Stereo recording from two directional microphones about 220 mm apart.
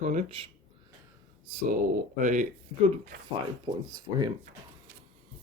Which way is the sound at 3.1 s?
45° right (ahead or behind).